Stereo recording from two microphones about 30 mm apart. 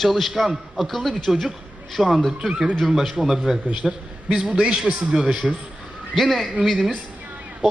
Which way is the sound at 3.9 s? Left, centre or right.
Right.